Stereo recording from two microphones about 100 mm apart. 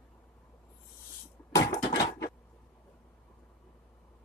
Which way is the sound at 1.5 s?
30° left (ahead or behind).